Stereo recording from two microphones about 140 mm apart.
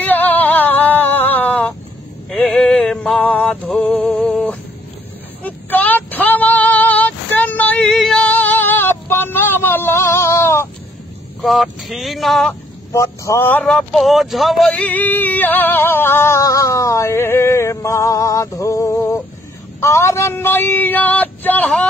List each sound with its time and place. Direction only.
0.0 s female singing: 15° left (ahead or behind)
2.2 s music: 5° left (ahead or behind)
5.4 s female singing: 10° left (ahead or behind)
11.4 s speech: centre (ahead or behind)
12.9 s speech: 20° left (ahead or behind)